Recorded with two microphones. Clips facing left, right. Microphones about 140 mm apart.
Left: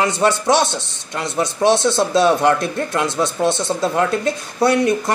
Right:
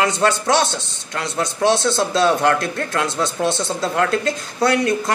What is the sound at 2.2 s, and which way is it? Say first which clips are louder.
Speech: left 1 dB; 15° left (ahead or behind).